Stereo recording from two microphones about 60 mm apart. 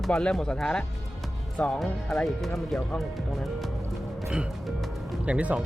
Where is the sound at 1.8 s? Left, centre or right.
Centre.